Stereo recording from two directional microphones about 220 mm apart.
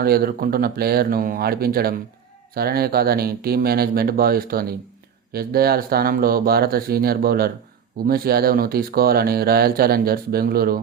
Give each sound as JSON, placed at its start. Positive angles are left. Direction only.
{"t": 0.0, "sound": "speech", "side_deg": -45}